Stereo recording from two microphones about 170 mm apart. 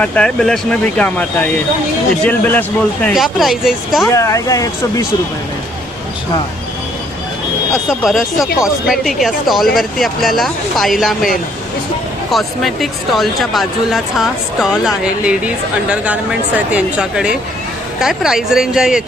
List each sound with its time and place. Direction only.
0.0 s speech: 5° left (ahead or behind)
3.1 s speech: centre (ahead or behind)
4.1 s speech: 20° left (ahead or behind)
7.9 s speech: centre (ahead or behind)
12.3 s speech: centre (ahead or behind)